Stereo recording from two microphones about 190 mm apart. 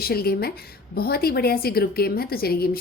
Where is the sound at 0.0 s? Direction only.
55° left (ahead or behind).